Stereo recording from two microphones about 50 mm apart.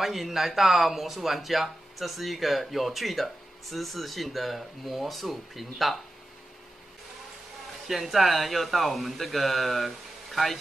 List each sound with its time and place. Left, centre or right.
0.0 s speech: centre
7.9 s speech: centre